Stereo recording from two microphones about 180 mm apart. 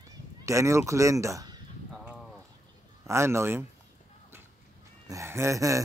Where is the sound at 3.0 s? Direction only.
15° right (ahead or behind).